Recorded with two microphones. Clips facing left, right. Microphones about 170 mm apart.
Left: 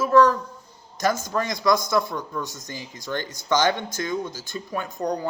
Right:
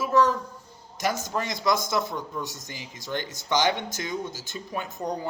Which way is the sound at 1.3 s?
20° right (ahead or behind).